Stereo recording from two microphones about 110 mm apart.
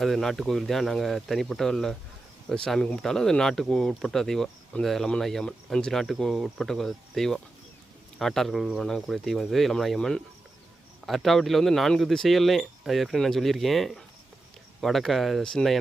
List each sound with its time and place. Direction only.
0.0 s speech: centre (ahead or behind)